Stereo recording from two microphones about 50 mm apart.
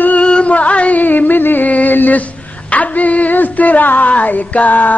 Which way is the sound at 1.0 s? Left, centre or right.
Left.